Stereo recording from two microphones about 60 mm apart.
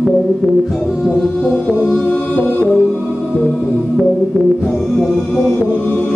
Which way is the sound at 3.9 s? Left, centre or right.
Centre.